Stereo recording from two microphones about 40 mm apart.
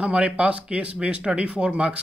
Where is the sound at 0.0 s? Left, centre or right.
Right.